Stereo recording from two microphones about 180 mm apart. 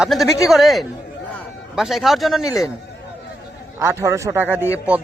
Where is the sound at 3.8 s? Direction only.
15° right (ahead or behind).